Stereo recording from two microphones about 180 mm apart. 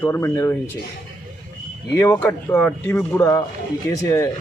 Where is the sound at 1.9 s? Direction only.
10° left (ahead or behind).